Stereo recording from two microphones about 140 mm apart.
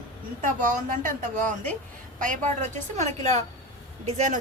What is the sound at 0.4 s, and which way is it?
A woman's voice, 65° right (ahead or behind).